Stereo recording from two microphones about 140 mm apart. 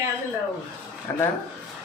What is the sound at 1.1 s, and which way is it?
Speech, 20° left (ahead or behind).